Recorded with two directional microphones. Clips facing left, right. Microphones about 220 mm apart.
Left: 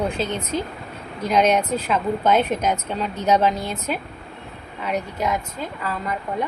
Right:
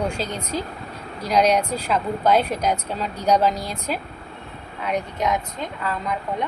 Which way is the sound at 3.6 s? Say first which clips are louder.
Left 1 dB; 35° right (ahead or behind).